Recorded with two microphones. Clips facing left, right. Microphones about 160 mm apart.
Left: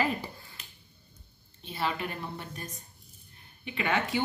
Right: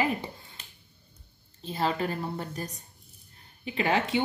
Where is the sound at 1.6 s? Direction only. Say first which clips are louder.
Right 4 dB; 35° right (ahead or behind).